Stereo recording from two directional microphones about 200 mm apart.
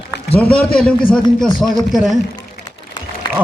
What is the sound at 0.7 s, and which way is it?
A man's voice, 5° left (ahead or behind).